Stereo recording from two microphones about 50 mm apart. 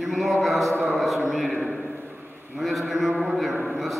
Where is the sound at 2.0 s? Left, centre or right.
Right.